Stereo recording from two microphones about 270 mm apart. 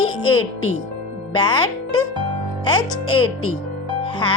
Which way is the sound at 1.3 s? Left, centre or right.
Centre.